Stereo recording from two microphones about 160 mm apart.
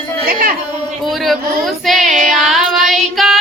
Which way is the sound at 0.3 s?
65° right (ahead or behind).